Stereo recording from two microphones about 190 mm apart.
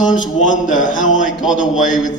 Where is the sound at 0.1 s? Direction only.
40° left (ahead or behind).